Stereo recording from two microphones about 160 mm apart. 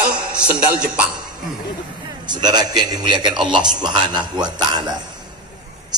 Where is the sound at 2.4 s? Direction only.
25° right (ahead or behind).